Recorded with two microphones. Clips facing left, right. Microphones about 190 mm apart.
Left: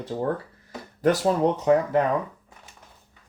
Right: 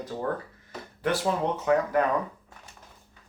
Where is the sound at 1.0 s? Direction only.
40° left (ahead or behind).